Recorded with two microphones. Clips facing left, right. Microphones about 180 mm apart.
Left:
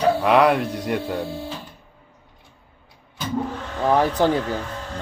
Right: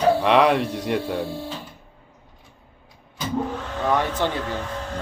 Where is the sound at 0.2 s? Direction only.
Centre (ahead or behind).